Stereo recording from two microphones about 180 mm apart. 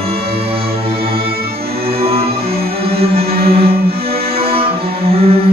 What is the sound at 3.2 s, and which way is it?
Music, 60° right (ahead or behind).